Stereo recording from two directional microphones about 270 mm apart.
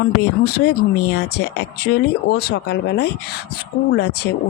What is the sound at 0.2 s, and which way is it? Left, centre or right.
Speech, left.